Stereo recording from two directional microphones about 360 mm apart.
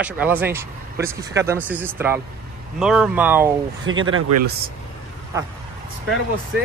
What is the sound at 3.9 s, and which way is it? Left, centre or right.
Speech, right.